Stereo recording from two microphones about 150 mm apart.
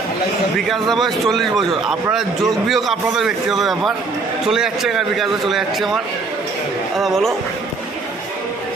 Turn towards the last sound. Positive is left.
turn(degrees=0)  # may be behind; listen again after turning